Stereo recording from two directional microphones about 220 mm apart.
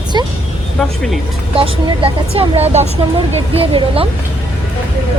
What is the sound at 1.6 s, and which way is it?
Speech, 25° right (ahead or behind).